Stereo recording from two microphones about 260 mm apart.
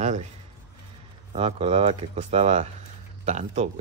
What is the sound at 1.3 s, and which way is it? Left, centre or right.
Speech, right.